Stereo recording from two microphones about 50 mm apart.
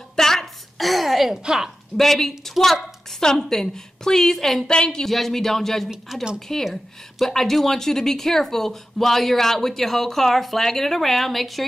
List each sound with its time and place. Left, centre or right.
0.1 s a sound: centre
1.4 s a woman's voice: centre
2.0 s a woman's voice: centre
4.6 s a woman's voice: centre
5.0 s a woman's voice: centre